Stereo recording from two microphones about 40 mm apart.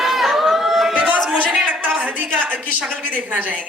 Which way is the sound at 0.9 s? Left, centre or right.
Right.